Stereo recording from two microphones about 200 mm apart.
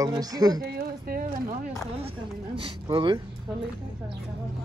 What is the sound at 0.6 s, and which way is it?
Speech, 50° right (ahead or behind).